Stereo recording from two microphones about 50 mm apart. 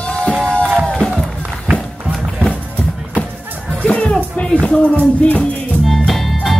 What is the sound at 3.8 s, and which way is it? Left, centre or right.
Music, left.